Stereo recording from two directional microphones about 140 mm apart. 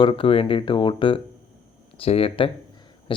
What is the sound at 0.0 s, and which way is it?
Speech, 40° left (ahead or behind).